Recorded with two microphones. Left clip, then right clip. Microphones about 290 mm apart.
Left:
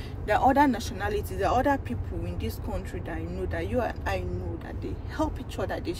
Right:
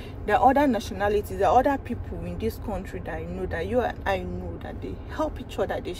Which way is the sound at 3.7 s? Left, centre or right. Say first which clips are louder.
Right 5 dB; centre.